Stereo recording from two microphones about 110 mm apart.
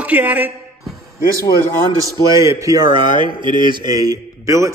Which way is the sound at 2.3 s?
30° right (ahead or behind).